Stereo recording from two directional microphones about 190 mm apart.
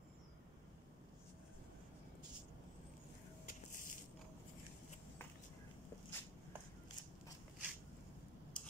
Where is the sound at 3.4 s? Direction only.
45° left (ahead or behind).